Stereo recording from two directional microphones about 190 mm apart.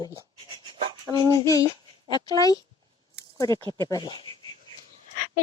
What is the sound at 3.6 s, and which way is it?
Speech, 25° right (ahead or behind).